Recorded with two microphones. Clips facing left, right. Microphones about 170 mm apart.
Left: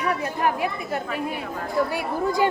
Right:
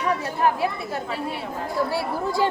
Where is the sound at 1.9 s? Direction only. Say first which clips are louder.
Left 1 dB; 15° left (ahead or behind).